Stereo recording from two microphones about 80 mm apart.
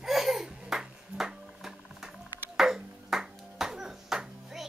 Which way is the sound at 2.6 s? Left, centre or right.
Centre.